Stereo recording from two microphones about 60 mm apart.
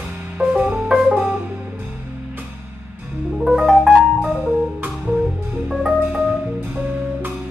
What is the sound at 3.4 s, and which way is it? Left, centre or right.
Music, centre.